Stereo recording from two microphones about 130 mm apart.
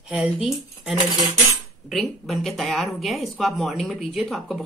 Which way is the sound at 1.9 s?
Centre (ahead or behind).